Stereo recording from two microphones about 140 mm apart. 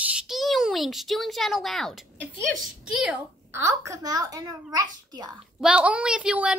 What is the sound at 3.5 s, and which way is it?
A child's voice, 20° right (ahead or behind).